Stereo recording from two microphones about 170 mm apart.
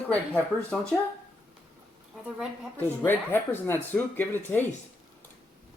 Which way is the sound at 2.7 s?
10° left (ahead or behind).